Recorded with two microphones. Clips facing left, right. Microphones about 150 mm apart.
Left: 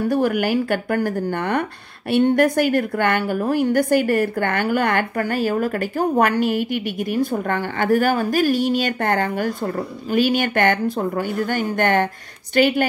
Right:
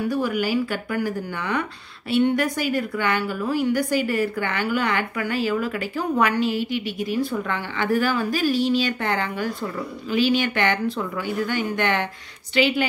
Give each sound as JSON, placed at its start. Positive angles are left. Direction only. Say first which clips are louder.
{"t": 0.1, "sound": "speech", "louder": "left 5 dB", "side_deg": 55}